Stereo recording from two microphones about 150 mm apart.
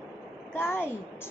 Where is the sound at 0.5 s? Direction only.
15° left (ahead or behind).